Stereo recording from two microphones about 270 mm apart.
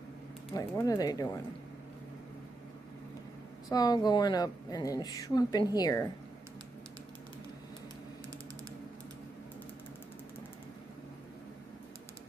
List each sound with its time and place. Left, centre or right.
0.6 s a woman's voice: centre
3.7 s a woman's voice: centre